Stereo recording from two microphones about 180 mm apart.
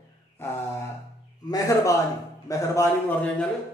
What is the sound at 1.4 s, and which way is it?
A man's voice, 20° left (ahead or behind).